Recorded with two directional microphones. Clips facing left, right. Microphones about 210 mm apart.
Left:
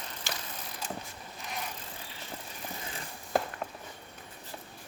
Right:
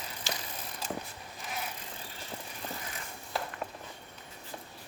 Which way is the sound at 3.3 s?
50° left (ahead or behind).